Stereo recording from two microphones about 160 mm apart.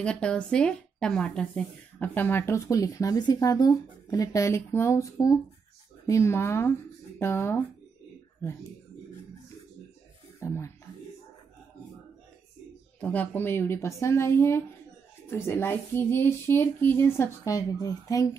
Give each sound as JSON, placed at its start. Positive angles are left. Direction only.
{"t": 0.0, "sound": "speech", "side_deg": 5}
{"t": 10.4, "sound": "speech", "side_deg": 15}
{"t": 13.0, "sound": "speech", "side_deg": 10}